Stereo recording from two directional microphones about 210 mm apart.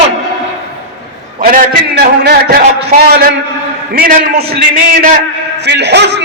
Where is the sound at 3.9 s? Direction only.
45° right (ahead or behind).